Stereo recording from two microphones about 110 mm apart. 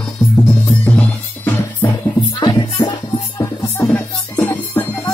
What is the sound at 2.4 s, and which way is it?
Music, 45° left (ahead or behind).